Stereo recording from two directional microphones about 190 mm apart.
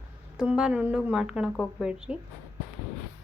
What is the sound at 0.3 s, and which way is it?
A woman's voice, 5° right (ahead or behind).